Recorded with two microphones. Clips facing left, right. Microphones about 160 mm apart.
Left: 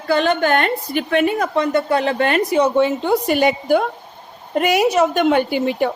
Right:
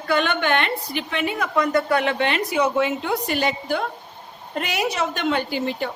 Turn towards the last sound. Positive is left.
turn(degrees=60)  # may be behind; listen again after turning